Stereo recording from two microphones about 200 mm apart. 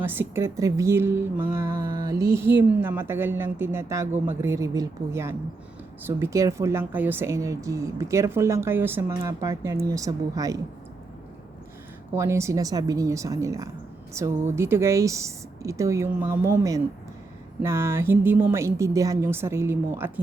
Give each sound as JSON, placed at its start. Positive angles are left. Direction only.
{"t": 0.0, "sound": "a woman's voice", "side_deg": -10}
{"t": 12.1, "sound": "a woman's voice", "side_deg": -15}